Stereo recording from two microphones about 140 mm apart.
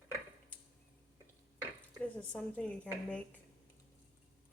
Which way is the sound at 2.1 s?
10° left (ahead or behind).